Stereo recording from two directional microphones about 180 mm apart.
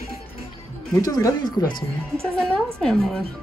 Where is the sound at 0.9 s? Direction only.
20° left (ahead or behind).